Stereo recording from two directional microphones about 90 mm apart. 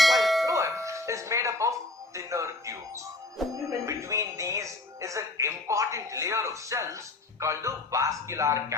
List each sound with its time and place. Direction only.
0.0 s bell: centre (ahead or behind)
0.4 s music: 35° right (ahead or behind)
2.1 s speech: 35° right (ahead or behind)